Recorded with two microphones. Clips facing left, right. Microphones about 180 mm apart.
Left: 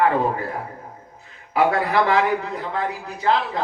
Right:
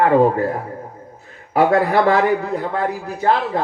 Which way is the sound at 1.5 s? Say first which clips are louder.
Right 4 dB; 45° right (ahead or behind).